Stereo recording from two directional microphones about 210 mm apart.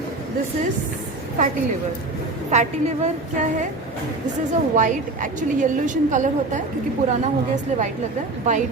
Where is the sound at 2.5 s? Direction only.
35° right (ahead or behind).